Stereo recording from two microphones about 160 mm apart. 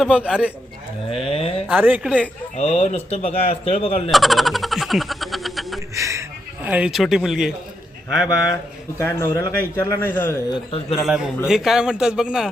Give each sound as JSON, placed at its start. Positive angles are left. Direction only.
{"t": 0.0, "sound": "speech", "side_deg": -5}
{"t": 1.1, "sound": "speech", "side_deg": 35}
{"t": 1.6, "sound": "speech", "side_deg": -10}
{"t": 2.6, "sound": "speech", "side_deg": 45}
{"t": 4.1, "sound": "a sound", "side_deg": 0}
{"t": 5.9, "sound": "a sound", "side_deg": -20}
{"t": 6.7, "sound": "a man's voice", "side_deg": -5}
{"t": 9.0, "sound": "a man's voice", "side_deg": 15}
{"t": 10.5, "sound": "speech", "side_deg": 35}
{"t": 11.0, "sound": "a man's voice", "side_deg": -5}